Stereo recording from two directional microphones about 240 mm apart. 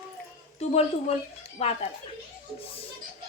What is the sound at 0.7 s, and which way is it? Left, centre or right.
A woman's voice, left.